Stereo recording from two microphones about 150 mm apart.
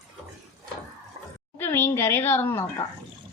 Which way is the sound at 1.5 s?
15° left (ahead or behind).